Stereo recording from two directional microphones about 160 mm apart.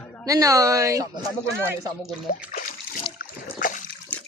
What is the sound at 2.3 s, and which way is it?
Speech, 60° left (ahead or behind).